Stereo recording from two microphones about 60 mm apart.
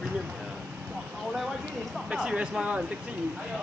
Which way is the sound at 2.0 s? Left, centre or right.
Centre.